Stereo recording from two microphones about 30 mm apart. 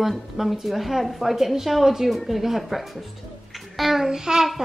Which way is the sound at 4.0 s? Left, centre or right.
Centre.